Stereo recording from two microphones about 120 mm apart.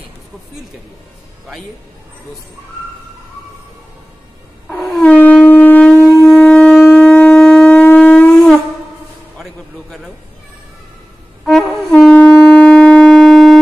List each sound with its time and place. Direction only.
4.6 s wail: centre (ahead or behind)
5.0 s shofar: 10° left (ahead or behind)
5.5 s wind instrument: 15° left (ahead or behind)
6.2 s shofar: 5° left (ahead or behind)
9.4 s a sound: centre (ahead or behind)
11.4 s wind instrument: 5° left (ahead or behind)